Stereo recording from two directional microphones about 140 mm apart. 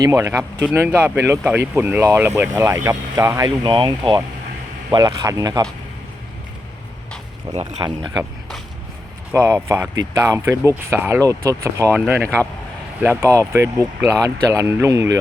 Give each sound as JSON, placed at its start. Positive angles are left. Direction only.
{"t": 0.0, "sound": "speech", "side_deg": -20}
{"t": 7.5, "sound": "speech", "side_deg": -45}
{"t": 7.8, "sound": "speech", "side_deg": -35}
{"t": 8.1, "sound": "a sound", "side_deg": 0}
{"t": 9.3, "sound": "speech", "side_deg": -15}
{"t": 12.2, "sound": "speech", "side_deg": 10}
{"t": 13.1, "sound": "speech", "side_deg": -25}